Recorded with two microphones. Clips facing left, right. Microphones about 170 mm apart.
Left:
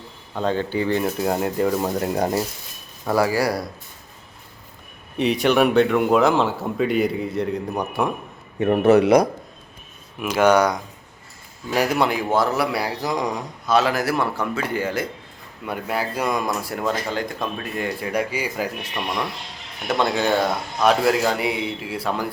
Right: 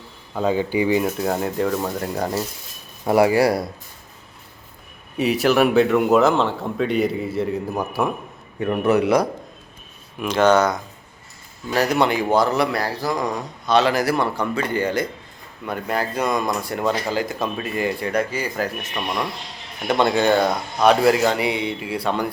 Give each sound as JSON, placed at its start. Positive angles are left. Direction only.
{"t": 0.3, "sound": "speech", "side_deg": -10}
{"t": 3.1, "sound": "speech", "side_deg": -25}
{"t": 5.1, "sound": "speech", "side_deg": -5}
{"t": 8.6, "sound": "speech", "side_deg": 30}
{"t": 10.2, "sound": "speech", "side_deg": 5}
{"t": 18.1, "sound": "speech", "side_deg": 10}
{"t": 19.9, "sound": "speech", "side_deg": 0}